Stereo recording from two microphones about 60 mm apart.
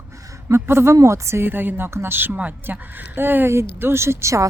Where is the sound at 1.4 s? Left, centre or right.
Right.